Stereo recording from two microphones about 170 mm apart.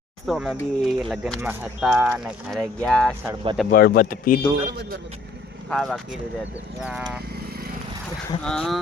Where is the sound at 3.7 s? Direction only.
60° left (ahead or behind).